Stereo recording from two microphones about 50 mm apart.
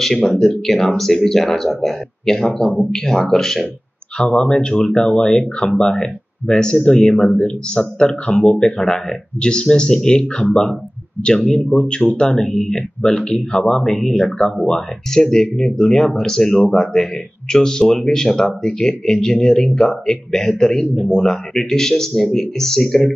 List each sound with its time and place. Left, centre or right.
0.0 s speech: centre
4.2 s speech: centre
11.2 s speech: centre